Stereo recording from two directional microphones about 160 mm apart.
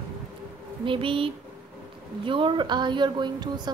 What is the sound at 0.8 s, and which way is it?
A woman's voice, 35° right (ahead or behind).